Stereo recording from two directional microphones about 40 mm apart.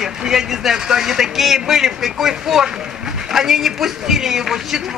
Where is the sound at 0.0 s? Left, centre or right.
Centre.